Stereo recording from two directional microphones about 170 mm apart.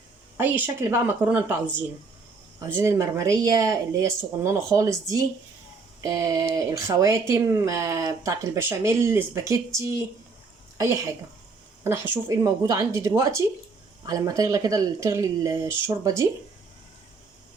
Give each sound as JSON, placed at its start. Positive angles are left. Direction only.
{"t": 0.3, "sound": "a woman's voice", "side_deg": -10}